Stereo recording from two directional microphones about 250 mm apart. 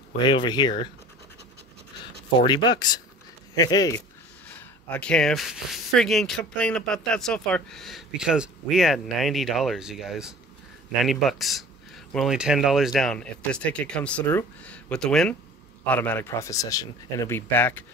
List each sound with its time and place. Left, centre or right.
0.2 s speech: centre
2.4 s speech: centre